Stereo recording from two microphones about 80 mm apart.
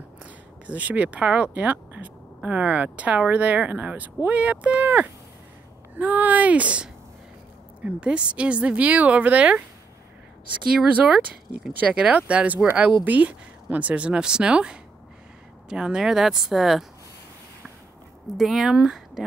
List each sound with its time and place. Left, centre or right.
0.2 s speech: centre
10.9 s speech: centre
18.2 s speech: centre